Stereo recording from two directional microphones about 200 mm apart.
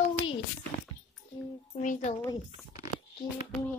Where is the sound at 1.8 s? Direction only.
35° left (ahead or behind).